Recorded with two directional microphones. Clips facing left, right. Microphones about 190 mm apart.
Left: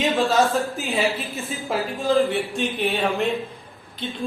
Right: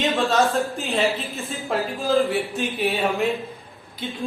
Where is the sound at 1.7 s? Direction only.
Centre (ahead or behind).